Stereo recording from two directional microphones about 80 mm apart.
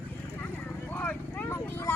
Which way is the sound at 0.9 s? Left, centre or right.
Left.